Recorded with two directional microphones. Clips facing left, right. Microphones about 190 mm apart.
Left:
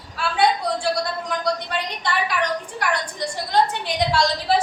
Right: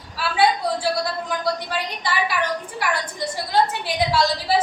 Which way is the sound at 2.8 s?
5° right (ahead or behind).